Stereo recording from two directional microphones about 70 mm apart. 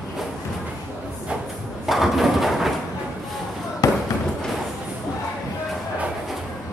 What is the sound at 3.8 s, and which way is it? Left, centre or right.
Fireworks, left.